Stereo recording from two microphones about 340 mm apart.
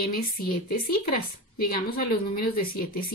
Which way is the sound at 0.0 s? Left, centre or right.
Left.